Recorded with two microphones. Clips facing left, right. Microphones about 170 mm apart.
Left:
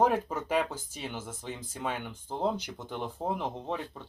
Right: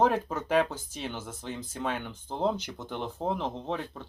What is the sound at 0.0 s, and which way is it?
Speech, 10° left (ahead or behind).